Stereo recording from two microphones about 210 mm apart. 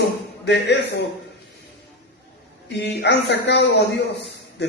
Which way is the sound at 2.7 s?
55° left (ahead or behind).